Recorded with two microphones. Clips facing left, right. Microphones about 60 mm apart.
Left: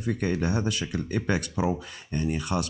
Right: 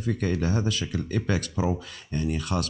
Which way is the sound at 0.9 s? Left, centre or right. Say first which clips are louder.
Left 1 dB; left.